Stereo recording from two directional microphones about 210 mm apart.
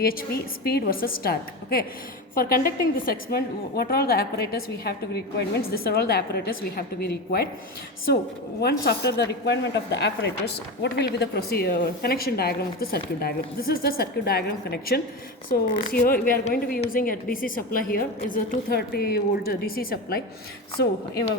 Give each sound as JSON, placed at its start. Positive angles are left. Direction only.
{"t": 0.0, "sound": "a woman's voice", "side_deg": 45}
{"t": 8.8, "sound": "a woman's voice", "side_deg": 50}